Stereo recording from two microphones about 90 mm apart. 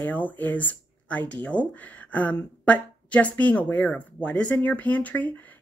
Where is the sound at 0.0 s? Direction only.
20° left (ahead or behind).